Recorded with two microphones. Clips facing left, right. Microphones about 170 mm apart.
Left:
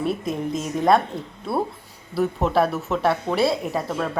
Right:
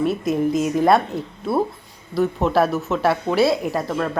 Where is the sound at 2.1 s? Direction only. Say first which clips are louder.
Right 2 dB; centre (ahead or behind).